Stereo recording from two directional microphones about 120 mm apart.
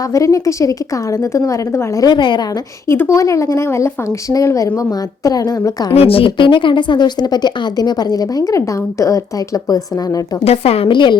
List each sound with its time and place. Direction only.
0.1 s speech: 25° left (ahead or behind)
2.9 s speech: 25° left (ahead or behind)
5.9 s a woman's voice: 55° left (ahead or behind); by 9.2 s 25° left (ahead or behind)
10.4 s a woman's voice: 60° left (ahead or behind); by 11.2 s 40° left (ahead or behind)